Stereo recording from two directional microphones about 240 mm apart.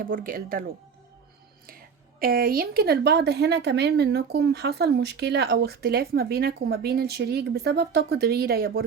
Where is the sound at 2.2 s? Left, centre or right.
Right.